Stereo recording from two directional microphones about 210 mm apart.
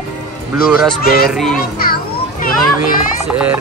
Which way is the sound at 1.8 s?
45° left (ahead or behind).